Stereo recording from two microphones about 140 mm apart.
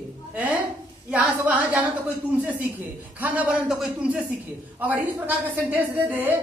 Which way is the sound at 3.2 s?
10° right (ahead or behind).